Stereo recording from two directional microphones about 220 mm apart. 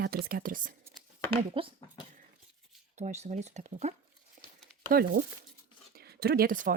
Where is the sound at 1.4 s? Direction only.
25° right (ahead or behind).